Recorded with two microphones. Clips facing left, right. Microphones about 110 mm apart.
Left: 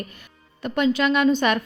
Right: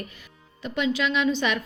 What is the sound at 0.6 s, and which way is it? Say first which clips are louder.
Speech: left 5 dB; 50° left (ahead or behind).